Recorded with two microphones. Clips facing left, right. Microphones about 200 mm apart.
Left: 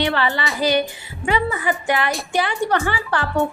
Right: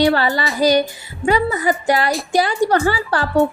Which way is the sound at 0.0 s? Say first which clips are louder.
Right 5 dB; 40° right (ahead or behind).